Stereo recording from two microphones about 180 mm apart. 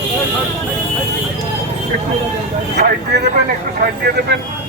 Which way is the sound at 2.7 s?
65° right (ahead or behind).